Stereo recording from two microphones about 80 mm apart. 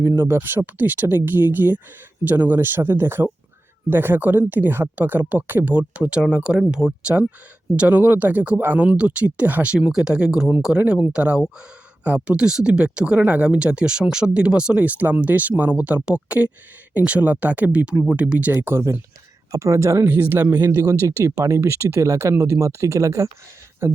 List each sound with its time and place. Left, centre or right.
0.0 s speech: right; by 18.5 s centre
18.5 s speech: right
20.1 s speech: right
20.5 s speech: right